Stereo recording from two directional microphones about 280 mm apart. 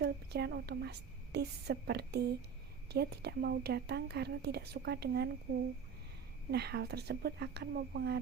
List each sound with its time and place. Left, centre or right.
0.0 s a woman's voice: right
6.5 s a woman's voice: right